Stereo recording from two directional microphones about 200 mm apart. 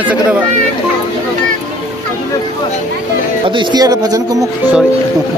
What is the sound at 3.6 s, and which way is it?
Speech, 20° right (ahead or behind).